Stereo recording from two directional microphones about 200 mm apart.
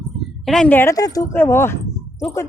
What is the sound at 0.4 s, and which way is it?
Speech, 5° left (ahead or behind).